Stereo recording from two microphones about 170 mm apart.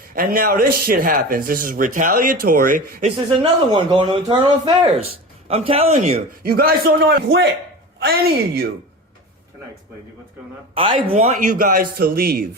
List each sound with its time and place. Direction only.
0.1 s a man's voice: 60° right (ahead or behind)
3.2 s speech: 30° right (ahead or behind)
6.4 s a man's voice: 60° right (ahead or behind)
10.8 s speech: 30° right (ahead or behind)
11.1 s a man's voice: 45° right (ahead or behind)